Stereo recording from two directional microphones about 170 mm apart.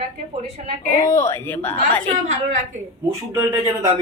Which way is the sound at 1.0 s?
15° left (ahead or behind).